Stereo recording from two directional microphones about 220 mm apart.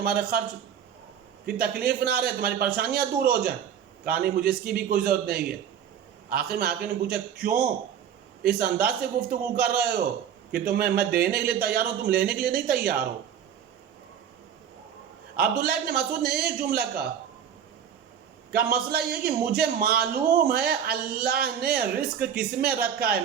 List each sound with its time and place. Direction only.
0.0 s a man's voice: 45° right (ahead or behind)
1.5 s a man's voice: 45° right (ahead or behind)
15.4 s a man's voice: 45° right (ahead or behind)
18.5 s a man's voice: 45° right (ahead or behind)